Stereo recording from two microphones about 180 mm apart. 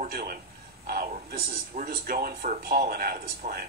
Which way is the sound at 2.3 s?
45° right (ahead or behind).